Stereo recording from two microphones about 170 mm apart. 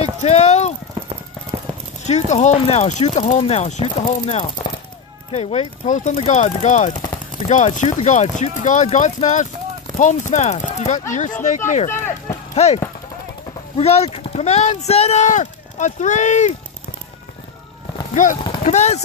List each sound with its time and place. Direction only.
0.2 s clip-clop: 40° left (ahead or behind)
2.0 s speech: 40° left (ahead or behind)
11.9 s speech: 15° left (ahead or behind)
12.5 s speech: 40° left (ahead or behind)
18.1 s speech: 50° left (ahead or behind)
18.4 s a sound: 30° left (ahead or behind)
18.7 s speech: 40° left (ahead or behind)